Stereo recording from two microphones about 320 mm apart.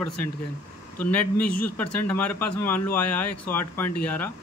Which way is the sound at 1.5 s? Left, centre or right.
Left.